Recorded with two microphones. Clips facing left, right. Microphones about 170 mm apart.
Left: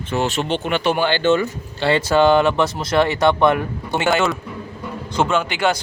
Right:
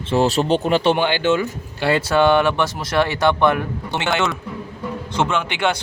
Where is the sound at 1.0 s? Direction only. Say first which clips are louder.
Left 1 dB; 10° right (ahead or behind).